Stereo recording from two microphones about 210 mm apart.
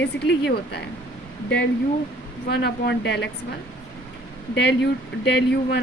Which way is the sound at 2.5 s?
50° left (ahead or behind).